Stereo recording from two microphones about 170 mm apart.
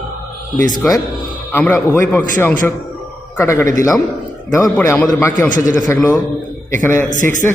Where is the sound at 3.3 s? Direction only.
15° left (ahead or behind).